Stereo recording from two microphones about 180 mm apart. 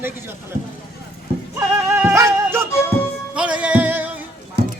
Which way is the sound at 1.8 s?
15° right (ahead or behind).